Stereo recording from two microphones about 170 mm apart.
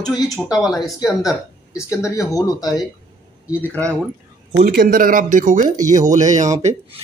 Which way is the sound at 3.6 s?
10° left (ahead or behind).